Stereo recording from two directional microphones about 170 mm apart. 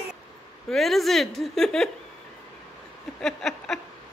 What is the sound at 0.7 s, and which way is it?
A woman's voice, centre (ahead or behind).